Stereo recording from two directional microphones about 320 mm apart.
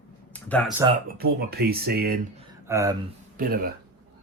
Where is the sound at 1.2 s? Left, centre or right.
Right.